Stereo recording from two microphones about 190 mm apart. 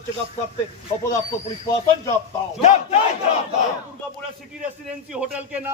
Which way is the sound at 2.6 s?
35° left (ahead or behind).